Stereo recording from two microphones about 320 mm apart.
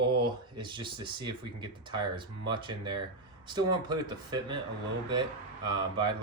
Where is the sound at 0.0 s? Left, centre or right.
Centre.